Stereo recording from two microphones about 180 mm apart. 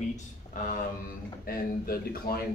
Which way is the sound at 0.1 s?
45° left (ahead or behind).